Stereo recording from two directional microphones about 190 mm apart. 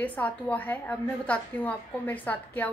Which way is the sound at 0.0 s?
10° left (ahead or behind).